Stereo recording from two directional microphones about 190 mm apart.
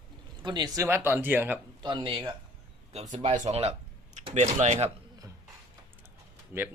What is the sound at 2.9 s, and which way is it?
Speech, 35° right (ahead or behind).